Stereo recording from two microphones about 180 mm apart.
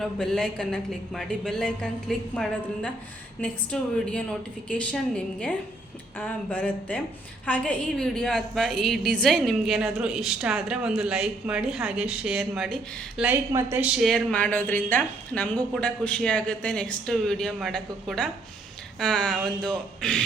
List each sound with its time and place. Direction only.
0.0 s a woman's voice: 5° left (ahead or behind)